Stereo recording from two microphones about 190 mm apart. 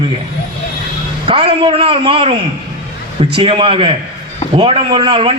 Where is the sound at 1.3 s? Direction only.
30° right (ahead or behind).